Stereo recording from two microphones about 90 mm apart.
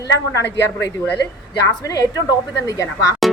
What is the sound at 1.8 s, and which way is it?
Speech, 40° left (ahead or behind).